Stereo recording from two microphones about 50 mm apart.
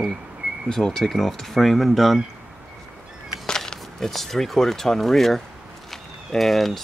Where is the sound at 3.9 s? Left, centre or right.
Centre.